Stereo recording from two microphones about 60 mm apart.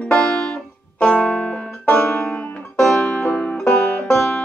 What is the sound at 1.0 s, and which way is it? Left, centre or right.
Music, left.